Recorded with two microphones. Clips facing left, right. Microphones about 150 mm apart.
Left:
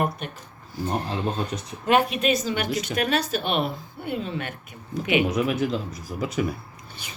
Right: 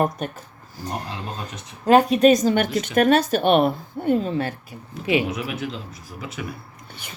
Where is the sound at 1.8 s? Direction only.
35° right (ahead or behind).